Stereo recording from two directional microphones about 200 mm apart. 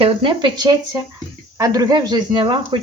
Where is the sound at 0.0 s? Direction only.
25° right (ahead or behind).